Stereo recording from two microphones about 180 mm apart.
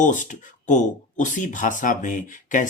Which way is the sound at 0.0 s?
45° left (ahead or behind).